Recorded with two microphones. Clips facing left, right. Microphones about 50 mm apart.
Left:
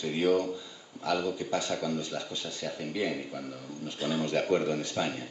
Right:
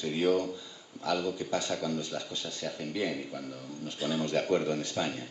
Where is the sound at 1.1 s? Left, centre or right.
Centre.